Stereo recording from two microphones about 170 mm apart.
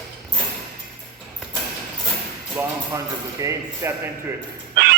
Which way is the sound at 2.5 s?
20° right (ahead or behind).